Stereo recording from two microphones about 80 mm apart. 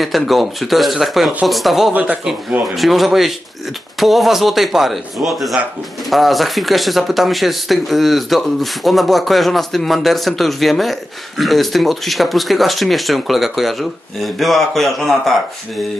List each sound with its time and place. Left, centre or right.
0.0 s speech: centre
1.9 s speech: centre
2.6 s speech: centre